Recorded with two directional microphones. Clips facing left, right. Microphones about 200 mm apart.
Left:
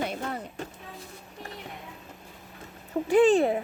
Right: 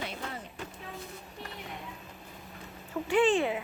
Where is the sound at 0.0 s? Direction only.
45° left (ahead or behind).